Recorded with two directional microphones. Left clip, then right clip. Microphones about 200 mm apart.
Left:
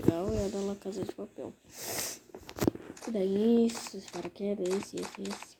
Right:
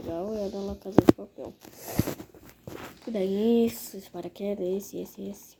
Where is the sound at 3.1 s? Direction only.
20° right (ahead or behind).